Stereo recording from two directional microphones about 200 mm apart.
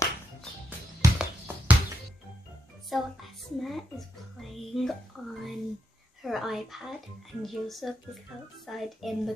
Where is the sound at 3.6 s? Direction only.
Centre (ahead or behind).